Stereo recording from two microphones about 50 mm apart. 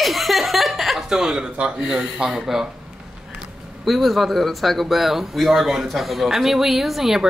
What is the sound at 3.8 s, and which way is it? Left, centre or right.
A woman's voice, centre.